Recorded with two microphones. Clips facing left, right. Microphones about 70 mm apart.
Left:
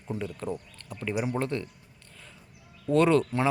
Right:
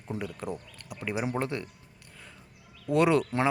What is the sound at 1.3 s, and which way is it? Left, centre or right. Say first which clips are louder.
Speech: left 1 dB; right.